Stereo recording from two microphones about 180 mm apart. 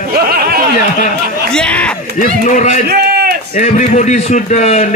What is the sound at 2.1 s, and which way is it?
A man's voice, 45° left (ahead or behind).